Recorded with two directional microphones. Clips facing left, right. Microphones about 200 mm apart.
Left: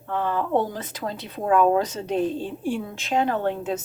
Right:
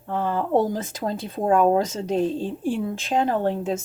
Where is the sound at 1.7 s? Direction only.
45° right (ahead or behind).